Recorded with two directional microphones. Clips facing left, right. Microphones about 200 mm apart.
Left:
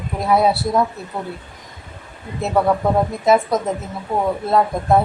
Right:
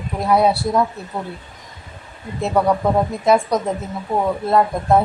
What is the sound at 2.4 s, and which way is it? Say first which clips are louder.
Speech: even; centre (ahead or behind).